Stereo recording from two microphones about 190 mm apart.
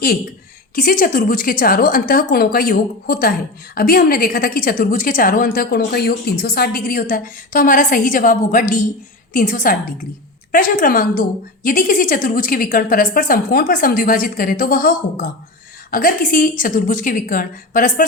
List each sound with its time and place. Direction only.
0.8 s a woman's voice: 45° left (ahead or behind)